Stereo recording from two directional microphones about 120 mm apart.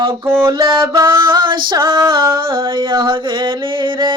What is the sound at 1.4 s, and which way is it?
Female singing, 40° right (ahead or behind).